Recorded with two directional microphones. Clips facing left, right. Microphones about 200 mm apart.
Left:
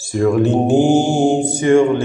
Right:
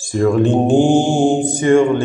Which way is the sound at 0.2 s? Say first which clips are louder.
Right 1 dB; 5° left (ahead or behind).